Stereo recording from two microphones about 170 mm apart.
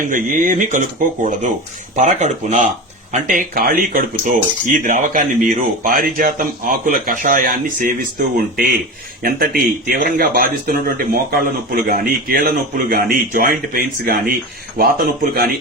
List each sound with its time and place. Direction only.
0.0 s speech: 50° right (ahead or behind)
9.2 s speech: 60° right (ahead or behind)